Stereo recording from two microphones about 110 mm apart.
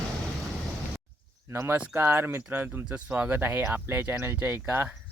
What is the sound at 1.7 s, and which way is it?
Speech, 20° right (ahead or behind).